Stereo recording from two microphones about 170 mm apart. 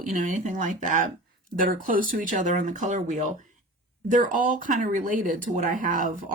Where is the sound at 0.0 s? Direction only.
50° right (ahead or behind).